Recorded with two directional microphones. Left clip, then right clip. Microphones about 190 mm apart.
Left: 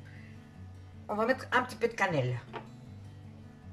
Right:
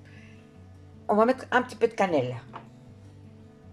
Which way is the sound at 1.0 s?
45° right (ahead or behind).